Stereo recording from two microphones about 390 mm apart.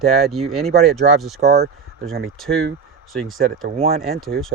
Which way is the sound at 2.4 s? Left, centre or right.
Centre.